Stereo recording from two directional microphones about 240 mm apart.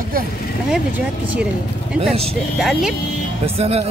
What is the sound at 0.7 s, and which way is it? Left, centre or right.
A woman's voice, centre.